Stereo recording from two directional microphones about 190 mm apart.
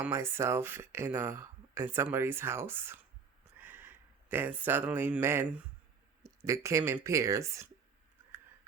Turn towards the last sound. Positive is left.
turn(degrees=-15)  # may be behind; listen again after turning